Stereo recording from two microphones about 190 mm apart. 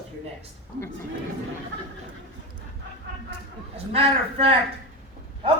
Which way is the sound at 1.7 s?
65° right (ahead or behind).